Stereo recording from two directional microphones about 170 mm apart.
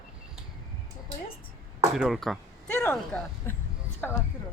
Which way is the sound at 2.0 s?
Centre (ahead or behind).